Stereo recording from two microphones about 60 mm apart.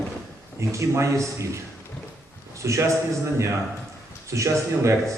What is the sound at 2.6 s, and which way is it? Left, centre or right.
Speech, right.